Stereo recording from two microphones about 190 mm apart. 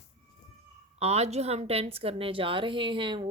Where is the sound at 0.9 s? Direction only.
35° right (ahead or behind).